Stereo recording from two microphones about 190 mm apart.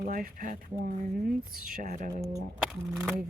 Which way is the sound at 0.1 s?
45° right (ahead or behind).